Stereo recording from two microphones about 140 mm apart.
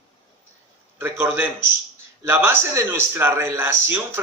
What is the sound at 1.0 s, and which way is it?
A man's voice, 15° right (ahead or behind).